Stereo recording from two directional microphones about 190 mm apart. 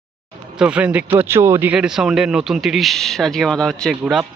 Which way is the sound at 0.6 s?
5° right (ahead or behind).